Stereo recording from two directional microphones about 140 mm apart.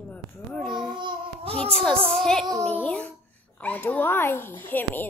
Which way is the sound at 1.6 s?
5° left (ahead or behind).